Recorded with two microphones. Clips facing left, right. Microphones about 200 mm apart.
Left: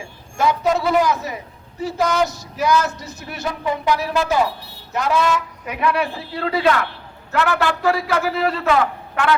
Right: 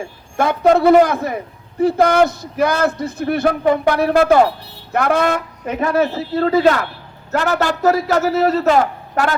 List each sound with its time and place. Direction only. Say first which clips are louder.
0.3 s a man's voice: right 5 dB; 55° right (ahead or behind)
5.7 s a man's voice: right 4 dB; 45° right (ahead or behind)